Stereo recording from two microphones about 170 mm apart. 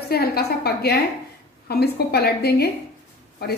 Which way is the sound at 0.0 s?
65° left (ahead or behind).